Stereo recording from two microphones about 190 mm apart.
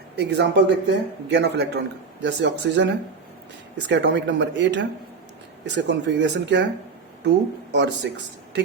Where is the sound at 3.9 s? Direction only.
65° right (ahead or behind).